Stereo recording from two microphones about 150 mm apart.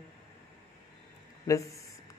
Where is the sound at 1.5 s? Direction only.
20° left (ahead or behind).